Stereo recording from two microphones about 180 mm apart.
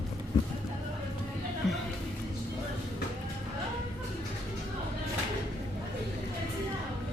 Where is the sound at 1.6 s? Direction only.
Centre (ahead or behind).